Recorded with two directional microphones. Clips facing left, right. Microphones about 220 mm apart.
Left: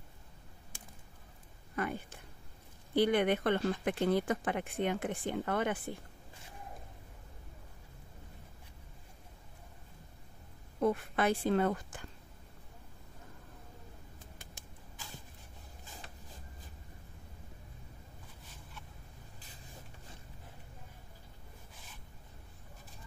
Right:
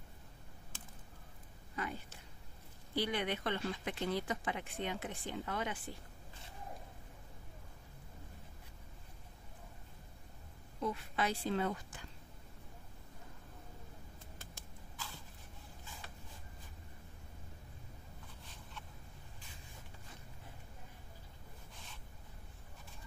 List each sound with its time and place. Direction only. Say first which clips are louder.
1.8 s speech: left 6 dB; 55° left (ahead or behind)
10.8 s speech: left 7 dB; 55° left (ahead or behind)
14.4 s a sound: even; 15° left (ahead or behind)